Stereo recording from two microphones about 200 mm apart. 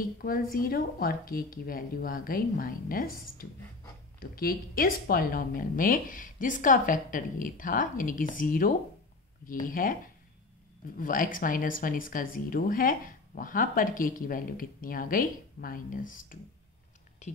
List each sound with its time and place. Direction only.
0.2 s speech: 45° left (ahead or behind)
11.0 s speech: 45° left (ahead or behind)